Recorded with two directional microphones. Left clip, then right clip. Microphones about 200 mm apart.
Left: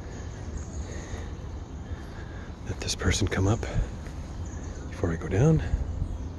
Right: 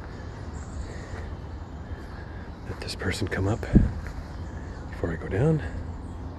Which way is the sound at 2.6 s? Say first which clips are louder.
Left 2 dB; 20° left (ahead or behind).